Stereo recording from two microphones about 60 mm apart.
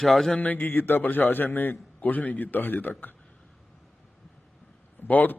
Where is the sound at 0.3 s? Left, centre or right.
Left.